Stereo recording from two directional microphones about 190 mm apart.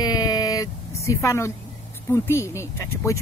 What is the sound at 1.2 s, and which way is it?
Speech, 15° left (ahead or behind).